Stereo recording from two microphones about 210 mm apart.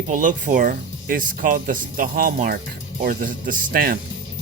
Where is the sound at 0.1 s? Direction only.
40° right (ahead or behind).